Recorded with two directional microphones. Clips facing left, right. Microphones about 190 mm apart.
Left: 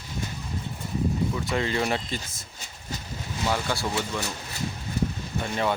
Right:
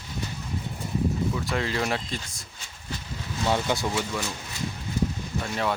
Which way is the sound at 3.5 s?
20° right (ahead or behind).